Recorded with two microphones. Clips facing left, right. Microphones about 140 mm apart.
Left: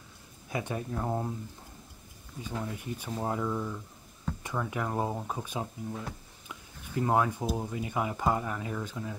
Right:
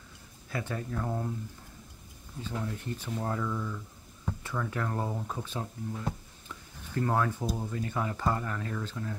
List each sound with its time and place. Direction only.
0.5 s speech: 15° left (ahead or behind)
2.4 s speech: 10° left (ahead or behind)